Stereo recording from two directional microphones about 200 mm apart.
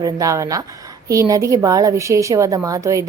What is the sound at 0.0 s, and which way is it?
Speech, 15° right (ahead or behind).